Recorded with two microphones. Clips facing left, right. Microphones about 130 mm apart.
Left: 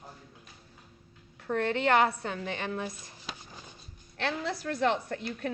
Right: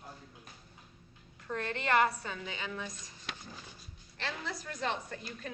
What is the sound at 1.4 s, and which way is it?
A woman's voice, 65° left (ahead or behind).